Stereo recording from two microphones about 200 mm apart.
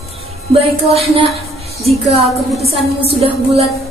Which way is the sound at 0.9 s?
30° right (ahead or behind).